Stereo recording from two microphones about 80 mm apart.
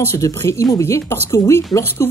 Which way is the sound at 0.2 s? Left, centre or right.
Left.